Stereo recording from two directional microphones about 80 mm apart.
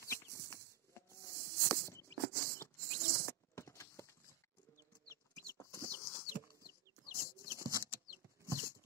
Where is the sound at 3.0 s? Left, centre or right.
Left.